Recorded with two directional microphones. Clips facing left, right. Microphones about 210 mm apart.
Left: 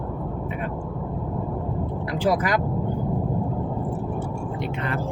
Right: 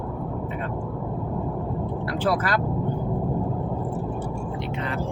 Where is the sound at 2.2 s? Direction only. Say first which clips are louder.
Left 2 dB; 15° left (ahead or behind).